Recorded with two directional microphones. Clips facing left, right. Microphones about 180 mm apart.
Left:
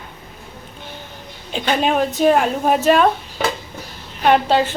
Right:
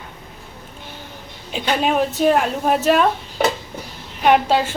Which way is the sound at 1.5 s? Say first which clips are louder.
Left 1 dB; centre (ahead or behind).